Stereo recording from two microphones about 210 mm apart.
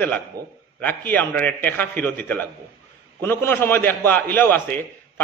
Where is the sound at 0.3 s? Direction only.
15° right (ahead or behind).